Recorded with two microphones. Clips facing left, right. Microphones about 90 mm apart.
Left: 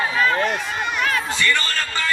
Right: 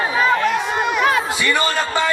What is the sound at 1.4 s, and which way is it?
Speech, 15° right (ahead or behind).